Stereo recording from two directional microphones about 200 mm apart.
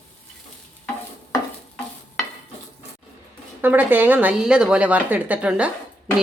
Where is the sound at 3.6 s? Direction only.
10° right (ahead or behind).